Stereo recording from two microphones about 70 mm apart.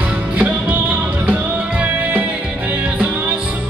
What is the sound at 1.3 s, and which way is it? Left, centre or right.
Music, right.